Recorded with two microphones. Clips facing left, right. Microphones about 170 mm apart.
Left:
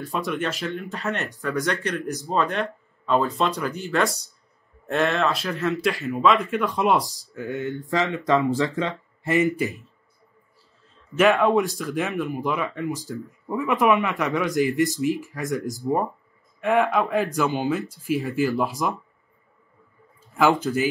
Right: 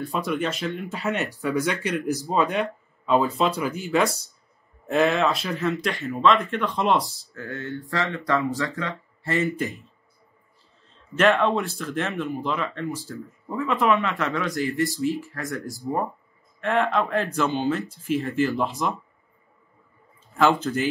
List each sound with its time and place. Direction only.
0.0 s speech: centre (ahead or behind); by 9.7 s 20° left (ahead or behind)
11.1 s speech: 15° left (ahead or behind)
20.3 s speech: 10° left (ahead or behind)